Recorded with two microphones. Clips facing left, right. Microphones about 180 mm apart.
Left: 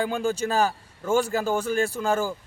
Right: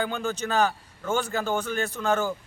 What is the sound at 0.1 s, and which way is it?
A man's voice, 35° left (ahead or behind).